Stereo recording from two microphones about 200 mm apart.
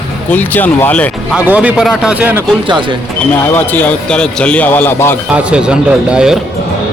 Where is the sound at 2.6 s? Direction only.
25° right (ahead or behind).